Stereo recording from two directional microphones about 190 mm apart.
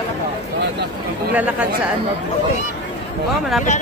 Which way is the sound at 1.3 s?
5° right (ahead or behind).